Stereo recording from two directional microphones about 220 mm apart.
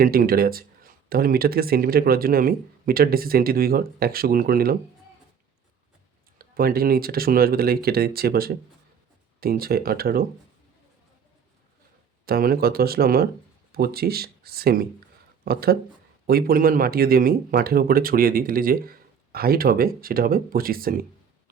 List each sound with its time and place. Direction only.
0.0 s speech: 40° right (ahead or behind)
6.4 s speech: 40° right (ahead or behind)
12.2 s speech: 45° right (ahead or behind)